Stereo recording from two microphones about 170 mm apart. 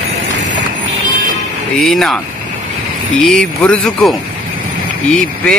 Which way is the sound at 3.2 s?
5° left (ahead or behind).